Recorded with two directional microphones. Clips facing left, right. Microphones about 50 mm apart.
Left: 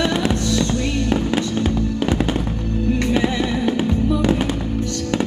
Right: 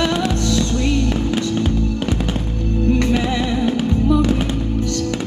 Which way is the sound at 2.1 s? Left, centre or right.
Left.